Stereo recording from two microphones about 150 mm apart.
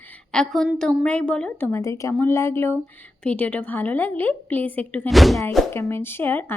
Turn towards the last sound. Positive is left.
turn(degrees=15)  # may be behind; listen again after turning